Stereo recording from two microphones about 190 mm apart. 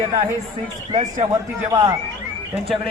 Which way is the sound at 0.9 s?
25° right (ahead or behind).